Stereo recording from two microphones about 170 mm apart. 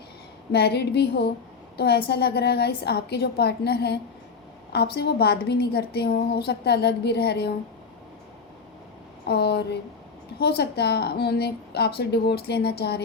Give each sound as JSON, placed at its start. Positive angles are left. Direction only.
{"t": 0.5, "sound": "a woman's voice", "side_deg": 75}
{"t": 9.2, "sound": "a woman's voice", "side_deg": 75}